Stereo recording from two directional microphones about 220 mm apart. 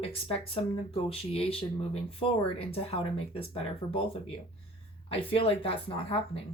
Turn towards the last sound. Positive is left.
turn(degrees=25)  # may be behind; listen again after turning